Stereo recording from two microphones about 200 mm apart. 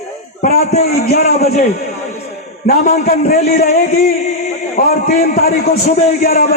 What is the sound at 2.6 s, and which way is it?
A man's voice, 45° left (ahead or behind).